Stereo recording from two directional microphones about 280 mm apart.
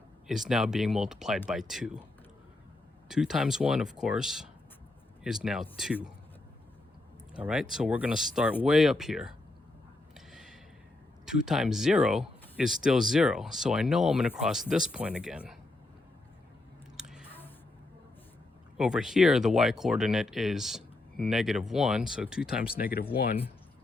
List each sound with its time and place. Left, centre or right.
0.3 s speech: centre
3.1 s speech: centre
7.3 s speech: centre
10.2 s a sound: centre
11.3 s speech: centre
17.0 s a sound: centre
18.8 s speech: centre
22.8 s speech: left